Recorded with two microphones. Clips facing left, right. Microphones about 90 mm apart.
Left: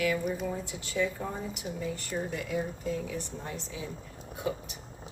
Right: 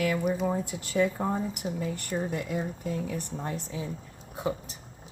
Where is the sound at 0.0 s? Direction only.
45° right (ahead or behind).